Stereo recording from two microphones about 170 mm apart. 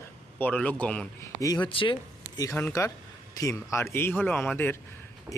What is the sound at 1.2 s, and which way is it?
Speech, 20° left (ahead or behind).